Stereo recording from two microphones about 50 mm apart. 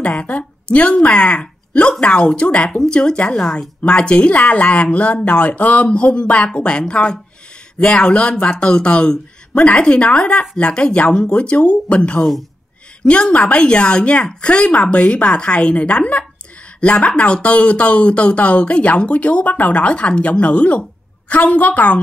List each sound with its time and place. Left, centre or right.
0.1 s speech: left
12.2 s a man's voice: centre
13.0 s a woman's voice: left